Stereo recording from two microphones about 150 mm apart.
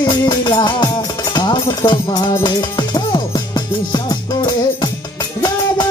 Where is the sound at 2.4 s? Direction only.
30° left (ahead or behind).